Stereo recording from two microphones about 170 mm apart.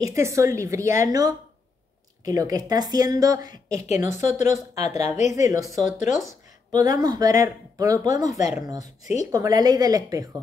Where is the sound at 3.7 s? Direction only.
45° left (ahead or behind).